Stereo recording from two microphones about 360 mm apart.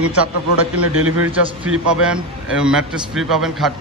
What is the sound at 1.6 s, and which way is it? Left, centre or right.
A man's voice, centre.